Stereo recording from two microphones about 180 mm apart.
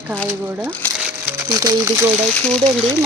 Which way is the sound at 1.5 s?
20° right (ahead or behind).